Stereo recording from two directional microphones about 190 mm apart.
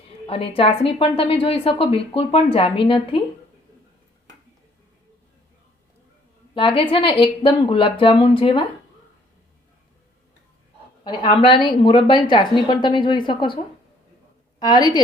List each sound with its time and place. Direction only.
0.3 s a woman's voice: 30° left (ahead or behind)
6.5 s a woman's voice: 25° left (ahead or behind)
11.0 s a woman's voice: 25° left (ahead or behind)
14.6 s a woman's voice: 20° left (ahead or behind)